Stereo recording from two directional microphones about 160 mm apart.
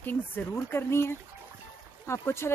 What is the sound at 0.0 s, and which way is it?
Speech, 10° left (ahead or behind).